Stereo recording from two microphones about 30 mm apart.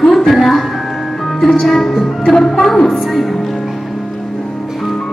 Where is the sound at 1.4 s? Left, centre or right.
Centre.